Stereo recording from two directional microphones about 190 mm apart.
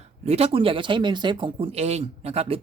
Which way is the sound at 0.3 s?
35° right (ahead or behind).